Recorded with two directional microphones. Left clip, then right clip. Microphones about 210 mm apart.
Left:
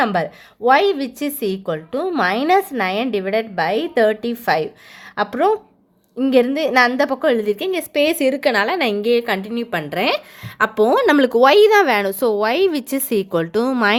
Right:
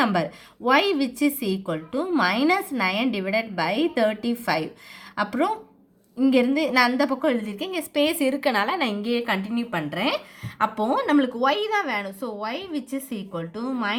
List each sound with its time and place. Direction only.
0.0 s speech: 30° left (ahead or behind); by 13.9 s 50° left (ahead or behind)